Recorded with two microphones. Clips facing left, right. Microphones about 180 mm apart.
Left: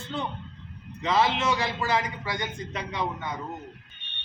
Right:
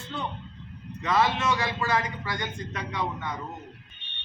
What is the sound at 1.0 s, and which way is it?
A man's voice, 25° left (ahead or behind).